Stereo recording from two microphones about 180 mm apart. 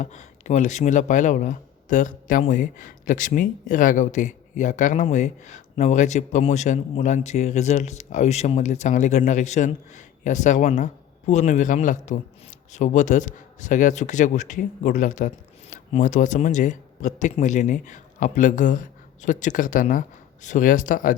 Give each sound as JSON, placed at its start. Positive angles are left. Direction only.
{"t": 0.0, "sound": "a man's voice", "side_deg": 40}